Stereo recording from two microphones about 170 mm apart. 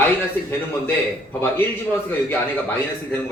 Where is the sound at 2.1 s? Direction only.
10° left (ahead or behind).